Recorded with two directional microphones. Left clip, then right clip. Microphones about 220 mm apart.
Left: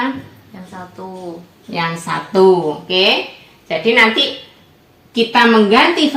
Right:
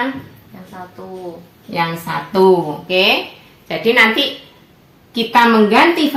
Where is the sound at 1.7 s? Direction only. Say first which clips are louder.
Even; 20° right (ahead or behind).